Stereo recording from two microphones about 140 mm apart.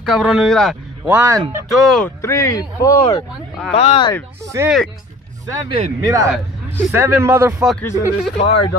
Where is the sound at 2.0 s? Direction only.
20° left (ahead or behind).